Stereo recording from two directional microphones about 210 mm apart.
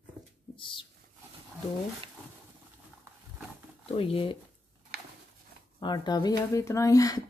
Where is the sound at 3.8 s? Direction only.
25° left (ahead or behind).